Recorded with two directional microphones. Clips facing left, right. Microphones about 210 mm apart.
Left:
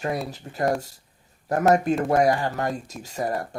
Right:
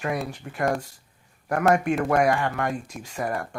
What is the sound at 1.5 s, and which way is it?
Speech, 35° left (ahead or behind).